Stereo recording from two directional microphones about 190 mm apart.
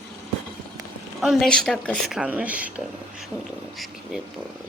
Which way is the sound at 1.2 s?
Centre (ahead or behind).